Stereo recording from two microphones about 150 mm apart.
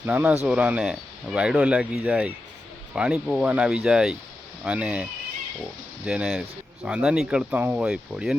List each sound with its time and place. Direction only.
0.0 s speech: 10° right (ahead or behind)
6.1 s speech: 5° right (ahead or behind)